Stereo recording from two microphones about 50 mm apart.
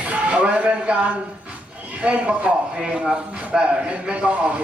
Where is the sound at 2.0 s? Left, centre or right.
Right.